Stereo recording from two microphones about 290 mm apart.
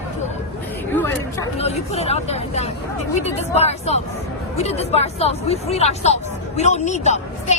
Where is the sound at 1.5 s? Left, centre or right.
Left.